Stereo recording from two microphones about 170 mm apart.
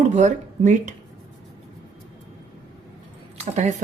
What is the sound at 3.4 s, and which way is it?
Speech, 40° right (ahead or behind).